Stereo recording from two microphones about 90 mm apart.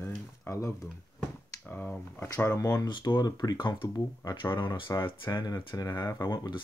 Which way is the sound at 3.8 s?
45° left (ahead or behind).